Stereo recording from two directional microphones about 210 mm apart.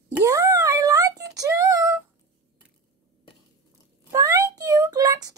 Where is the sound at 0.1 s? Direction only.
15° right (ahead or behind).